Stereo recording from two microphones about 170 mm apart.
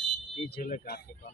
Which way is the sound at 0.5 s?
60° left (ahead or behind).